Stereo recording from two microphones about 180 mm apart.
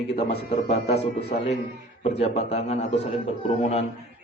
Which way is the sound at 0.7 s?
35° left (ahead or behind).